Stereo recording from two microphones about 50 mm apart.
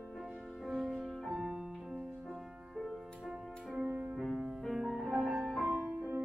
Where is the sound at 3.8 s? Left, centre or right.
Right.